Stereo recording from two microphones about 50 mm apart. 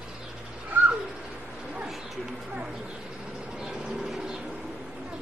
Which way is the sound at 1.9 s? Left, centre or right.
Centre.